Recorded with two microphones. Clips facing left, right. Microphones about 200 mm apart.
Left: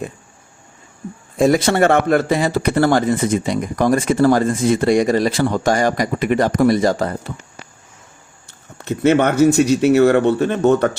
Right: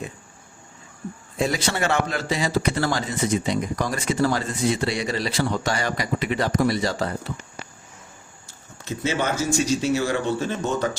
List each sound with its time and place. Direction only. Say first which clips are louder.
1.4 s speech: left 10 dB; 50° left (ahead or behind)
8.4 s speech: left 8 dB; 60° left (ahead or behind)